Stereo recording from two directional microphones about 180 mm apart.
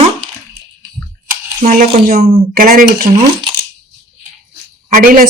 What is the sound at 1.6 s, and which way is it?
Speech, 50° right (ahead or behind).